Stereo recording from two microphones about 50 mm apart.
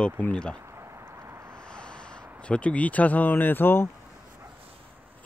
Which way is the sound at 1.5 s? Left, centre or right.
Centre.